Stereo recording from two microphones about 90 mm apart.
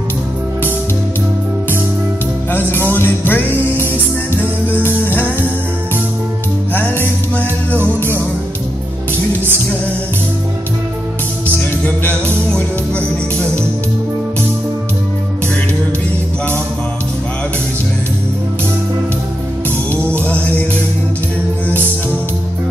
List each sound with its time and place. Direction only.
2.5 s music: 25° left (ahead or behind)
6.7 s music: 20° left (ahead or behind)
11.4 s music: 15° left (ahead or behind)
20.2 s music: 15° left (ahead or behind)